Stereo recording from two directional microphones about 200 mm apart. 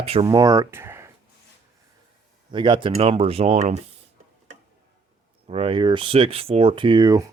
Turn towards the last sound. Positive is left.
turn(degrees=-15)  # may be behind; listen again after turning